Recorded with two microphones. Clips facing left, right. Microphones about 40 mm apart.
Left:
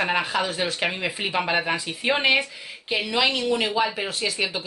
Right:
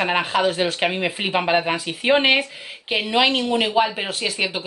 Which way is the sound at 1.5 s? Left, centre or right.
Centre.